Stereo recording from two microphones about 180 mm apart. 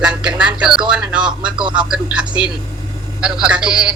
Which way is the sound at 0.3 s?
5° right (ahead or behind).